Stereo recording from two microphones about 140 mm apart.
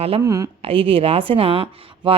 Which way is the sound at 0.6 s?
40° right (ahead or behind).